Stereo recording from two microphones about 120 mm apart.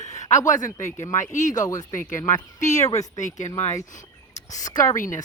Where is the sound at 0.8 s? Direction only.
25° left (ahead or behind).